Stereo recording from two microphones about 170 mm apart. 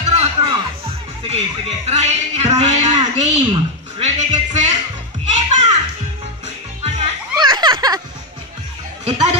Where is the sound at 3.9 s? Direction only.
40° right (ahead or behind).